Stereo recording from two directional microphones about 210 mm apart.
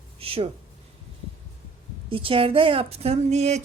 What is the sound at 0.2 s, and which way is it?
Speech, 25° right (ahead or behind).